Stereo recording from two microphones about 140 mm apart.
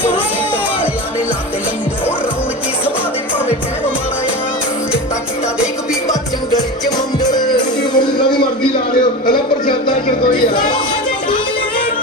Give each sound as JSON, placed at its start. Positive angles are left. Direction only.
{"t": 7.2, "sound": "music", "side_deg": 30}